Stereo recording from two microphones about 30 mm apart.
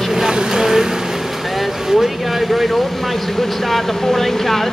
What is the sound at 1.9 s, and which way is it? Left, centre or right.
A man's voice, centre.